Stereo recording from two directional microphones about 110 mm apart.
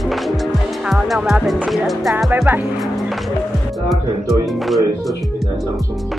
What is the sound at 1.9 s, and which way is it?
Speech, centre (ahead or behind).